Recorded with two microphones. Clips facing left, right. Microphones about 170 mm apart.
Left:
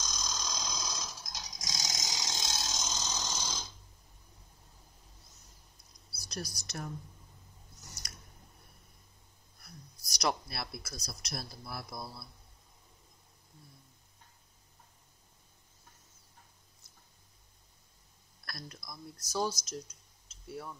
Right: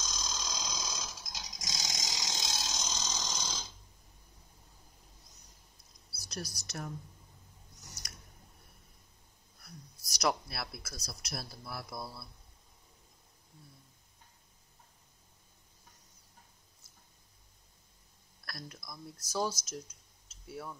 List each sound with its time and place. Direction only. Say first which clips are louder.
0.0 s a sound: left 1 dB; centre (ahead or behind)
6.1 s speech: left 1 dB; 5° right (ahead or behind)
10.0 s speech: right 1 dB; 5° right (ahead or behind)
18.5 s speech: even; 5° right (ahead or behind)